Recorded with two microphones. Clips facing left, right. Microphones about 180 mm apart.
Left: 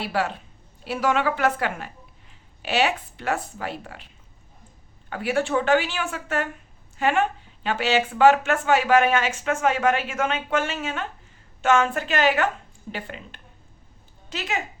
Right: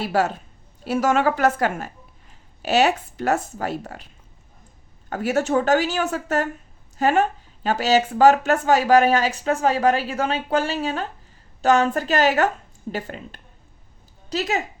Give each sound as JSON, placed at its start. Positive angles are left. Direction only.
{"t": 0.0, "sound": "a woman's voice", "side_deg": -40}